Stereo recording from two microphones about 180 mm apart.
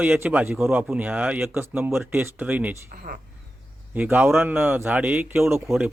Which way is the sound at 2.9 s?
50° right (ahead or behind).